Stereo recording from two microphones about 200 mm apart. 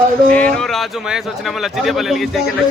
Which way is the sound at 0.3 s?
5° left (ahead or behind).